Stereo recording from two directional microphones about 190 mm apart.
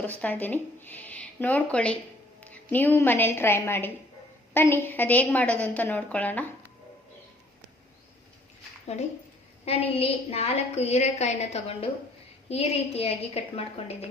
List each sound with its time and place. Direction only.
0.0 s a woman's voice: 10° left (ahead or behind)
9.6 s a woman's voice: 30° left (ahead or behind)